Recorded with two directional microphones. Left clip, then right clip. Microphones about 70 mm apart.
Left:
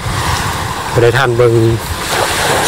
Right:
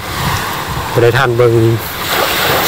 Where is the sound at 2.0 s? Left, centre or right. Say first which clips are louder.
Even; right.